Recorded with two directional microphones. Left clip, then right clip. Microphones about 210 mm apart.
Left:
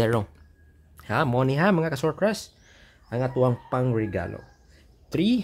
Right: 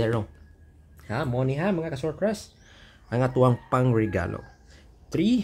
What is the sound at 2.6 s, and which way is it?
Speech, 5° left (ahead or behind).